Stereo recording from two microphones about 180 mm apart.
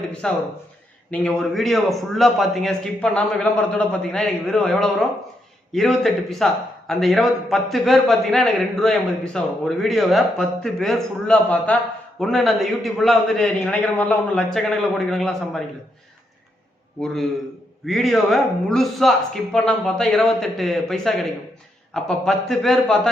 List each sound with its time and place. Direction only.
0.1 s a man's voice: 5° left (ahead or behind)
17.8 s a man's voice: centre (ahead or behind)